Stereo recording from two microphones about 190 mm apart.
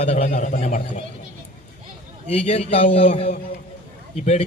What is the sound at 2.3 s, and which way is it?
A man's voice, 35° left (ahead or behind).